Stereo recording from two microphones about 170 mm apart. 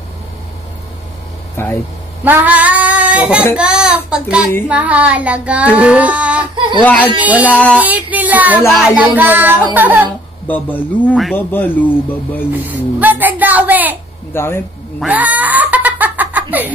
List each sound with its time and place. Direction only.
1.6 s speech: 15° left (ahead or behind)
2.2 s child singing: 10° right (ahead or behind)
6.5 s speech: 30° right (ahead or behind)
6.8 s speech: 10° left (ahead or behind)
7.2 s child singing: 10° right (ahead or behind)
10.0 s speech: 10° left (ahead or behind)
12.5 s a woman's voice: 10° right (ahead or behind)
14.3 s speech: 15° left (ahead or behind)
15.0 s giggle: 10° right (ahead or behind)